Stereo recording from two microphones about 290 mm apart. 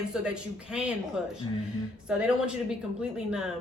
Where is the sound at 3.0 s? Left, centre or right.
Centre.